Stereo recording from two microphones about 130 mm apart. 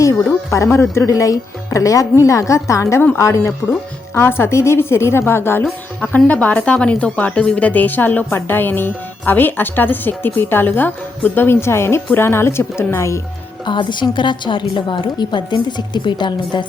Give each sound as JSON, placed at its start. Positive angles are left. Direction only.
{"t": 0.5, "sound": "speech", "side_deg": 20}
{"t": 13.7, "sound": "a woman's voice", "side_deg": 35}